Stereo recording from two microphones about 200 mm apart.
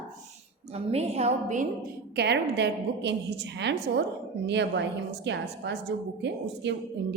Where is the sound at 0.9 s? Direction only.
30° right (ahead or behind).